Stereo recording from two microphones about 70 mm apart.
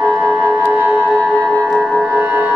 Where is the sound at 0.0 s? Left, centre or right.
Right.